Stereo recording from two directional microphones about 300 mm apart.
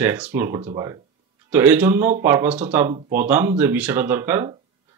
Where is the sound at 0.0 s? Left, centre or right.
Centre.